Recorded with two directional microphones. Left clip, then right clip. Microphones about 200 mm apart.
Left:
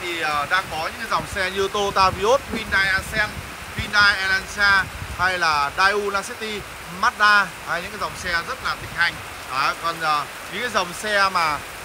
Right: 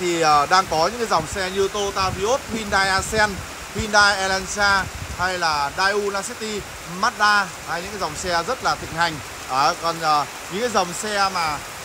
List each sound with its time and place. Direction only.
0.2 s speech: 25° right (ahead or behind)
1.1 s speech: 10° right (ahead or behind)
2.7 s speech: 20° right (ahead or behind); by 11.5 s 5° right (ahead or behind)